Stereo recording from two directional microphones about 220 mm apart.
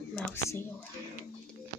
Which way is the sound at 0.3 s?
10° left (ahead or behind).